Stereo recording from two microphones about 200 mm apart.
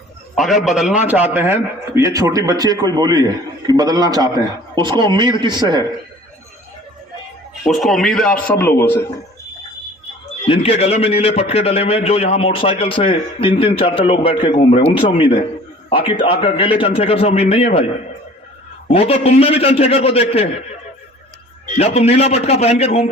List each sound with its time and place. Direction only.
0.3 s a man's voice: centre (ahead or behind); by 5.8 s 20° right (ahead or behind)
7.6 s a man's voice: centre (ahead or behind)
10.4 s a man's voice: 30° left (ahead or behind)
18.9 s a man's voice: 30° left (ahead or behind)
21.8 s a man's voice: 30° left (ahead or behind)